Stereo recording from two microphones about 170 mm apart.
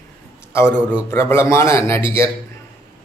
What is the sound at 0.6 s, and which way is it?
Speech, 5° right (ahead or behind).